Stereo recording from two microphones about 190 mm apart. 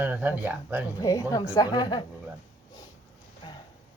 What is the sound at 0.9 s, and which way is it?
A woman's voice, 15° left (ahead or behind).